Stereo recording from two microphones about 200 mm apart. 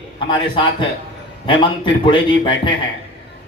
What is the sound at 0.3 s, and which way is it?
A man's voice, 25° left (ahead or behind).